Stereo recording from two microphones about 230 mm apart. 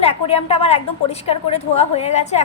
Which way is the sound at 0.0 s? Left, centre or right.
Left.